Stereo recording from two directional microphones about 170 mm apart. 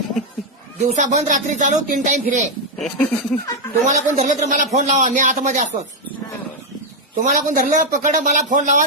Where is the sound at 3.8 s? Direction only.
45° right (ahead or behind).